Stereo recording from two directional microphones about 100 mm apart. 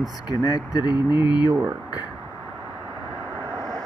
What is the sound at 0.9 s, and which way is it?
Speech, 15° right (ahead or behind).